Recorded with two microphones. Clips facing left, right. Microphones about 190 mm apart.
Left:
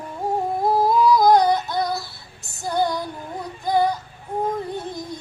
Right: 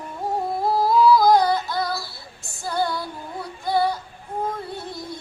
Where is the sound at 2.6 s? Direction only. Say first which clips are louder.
Left 2 dB; 20° left (ahead or behind).